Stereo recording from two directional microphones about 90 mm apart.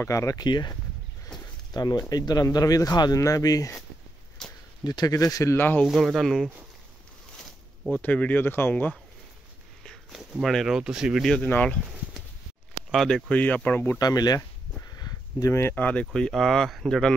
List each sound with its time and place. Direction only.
0.1 s speech: 40° left (ahead or behind)
0.5 s speech: 55° left (ahead or behind)
1.3 s a sound: 5° left (ahead or behind)
1.7 s speech: 50° left (ahead or behind)
4.8 s speech: 45° left (ahead or behind); by 5.9 s 25° left (ahead or behind)
5.9 s speech: centre (ahead or behind)
7.9 s speech: 15° left (ahead or behind)
10.4 s speech: centre (ahead or behind)
11.4 s speech: 15° left (ahead or behind)
12.9 s speech: centre (ahead or behind)
13.3 s speech: 15° left (ahead or behind)
13.9 s a sound: 45° left (ahead or behind)
15.7 s speech: 15° left (ahead or behind)